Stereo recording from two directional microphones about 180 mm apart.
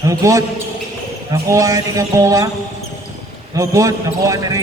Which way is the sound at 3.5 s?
15° right (ahead or behind).